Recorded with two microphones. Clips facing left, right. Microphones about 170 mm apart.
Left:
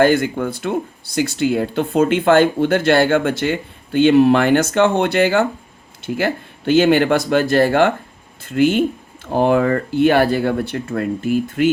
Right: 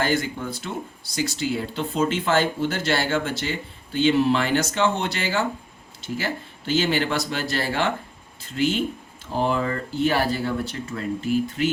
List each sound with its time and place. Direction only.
0.0 s speech: 55° left (ahead or behind)